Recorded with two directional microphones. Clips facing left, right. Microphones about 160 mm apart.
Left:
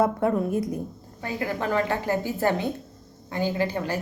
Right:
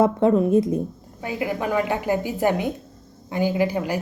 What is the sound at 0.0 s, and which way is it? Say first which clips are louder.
Speech: right 5 dB; 25° right (ahead or behind).